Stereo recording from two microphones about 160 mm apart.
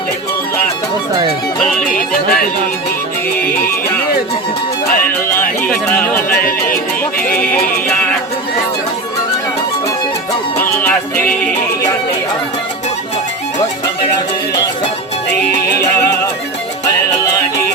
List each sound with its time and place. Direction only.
1.8 s music: 60° left (ahead or behind)
5.6 s music: 10° left (ahead or behind)
6.3 s music: 65° left (ahead or behind)
10.6 s music: 10° left (ahead or behind)
15.8 s music: 20° left (ahead or behind)